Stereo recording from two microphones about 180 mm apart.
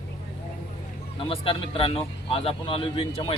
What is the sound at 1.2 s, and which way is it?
Speech, 30° left (ahead or behind).